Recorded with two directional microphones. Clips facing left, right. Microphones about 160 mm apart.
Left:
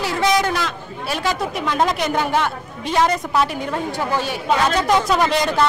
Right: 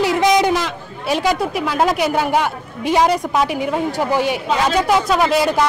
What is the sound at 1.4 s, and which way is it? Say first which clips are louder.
A woman's voice: right 2 dB; 5° right (ahead or behind).